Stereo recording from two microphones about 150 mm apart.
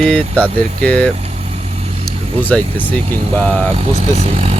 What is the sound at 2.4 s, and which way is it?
Speech, 10° left (ahead or behind).